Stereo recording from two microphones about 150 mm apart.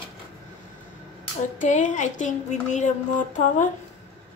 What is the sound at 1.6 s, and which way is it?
A woman's voice, 55° left (ahead or behind).